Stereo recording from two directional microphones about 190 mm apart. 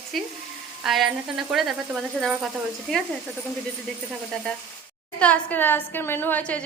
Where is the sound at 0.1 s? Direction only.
Centre (ahead or behind).